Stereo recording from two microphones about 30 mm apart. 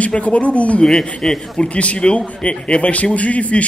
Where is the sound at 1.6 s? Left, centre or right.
Left.